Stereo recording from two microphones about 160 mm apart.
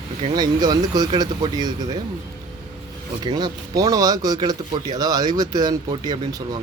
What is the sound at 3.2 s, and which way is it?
Speech, 25° right (ahead or behind).